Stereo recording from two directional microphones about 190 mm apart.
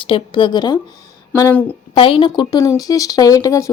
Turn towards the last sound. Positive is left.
turn(degrees=15)  # may be behind; listen again after turning